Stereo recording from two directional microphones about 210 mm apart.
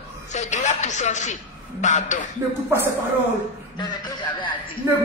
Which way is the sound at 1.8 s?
35° left (ahead or behind).